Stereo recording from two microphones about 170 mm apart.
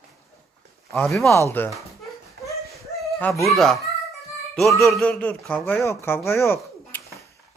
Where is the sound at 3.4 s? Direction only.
Centre (ahead or behind).